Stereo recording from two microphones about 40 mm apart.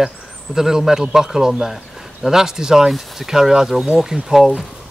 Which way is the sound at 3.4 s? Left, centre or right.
Centre.